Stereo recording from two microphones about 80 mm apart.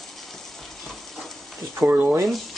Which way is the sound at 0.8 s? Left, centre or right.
Centre.